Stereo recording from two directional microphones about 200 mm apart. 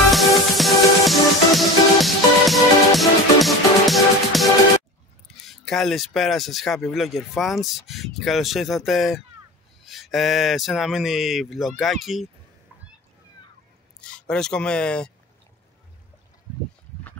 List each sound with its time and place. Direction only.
0.1 s music: centre (ahead or behind)
5.4 s speech: centre (ahead or behind)
14.0 s speech: 5° left (ahead or behind)